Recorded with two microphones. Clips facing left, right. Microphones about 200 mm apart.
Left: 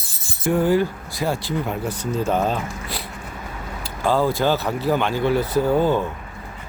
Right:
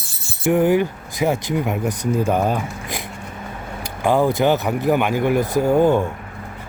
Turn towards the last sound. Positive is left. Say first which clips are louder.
# right 3 dB
turn(degrees=-15)  # may be behind; listen again after turning